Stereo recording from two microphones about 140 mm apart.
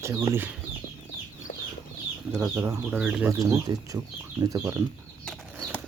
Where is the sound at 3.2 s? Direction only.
20° right (ahead or behind).